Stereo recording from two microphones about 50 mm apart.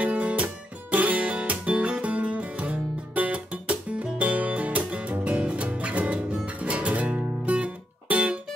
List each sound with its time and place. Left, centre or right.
0.0 s music: right